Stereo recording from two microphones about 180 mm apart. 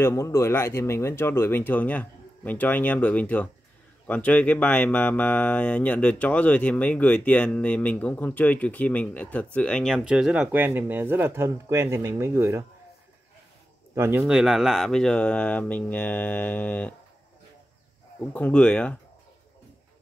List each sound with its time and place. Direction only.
0.0 s speech: 15° left (ahead or behind); by 12.6 s 15° right (ahead or behind)
13.9 s speech: 15° right (ahead or behind)
14.2 s speech: centre (ahead or behind)
18.3 s speech: 5° left (ahead or behind)